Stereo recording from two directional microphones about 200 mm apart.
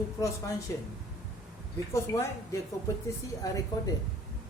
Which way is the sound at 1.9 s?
15° left (ahead or behind).